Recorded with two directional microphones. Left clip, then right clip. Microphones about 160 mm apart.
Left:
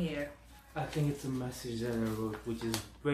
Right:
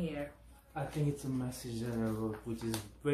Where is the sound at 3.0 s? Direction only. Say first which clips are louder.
Right 1 dB; 60° right (ahead or behind).